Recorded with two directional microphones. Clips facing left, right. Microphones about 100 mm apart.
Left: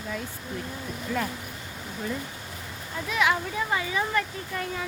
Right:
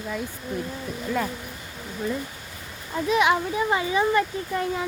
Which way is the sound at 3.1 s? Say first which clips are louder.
Right 4 dB; 20° right (ahead or behind).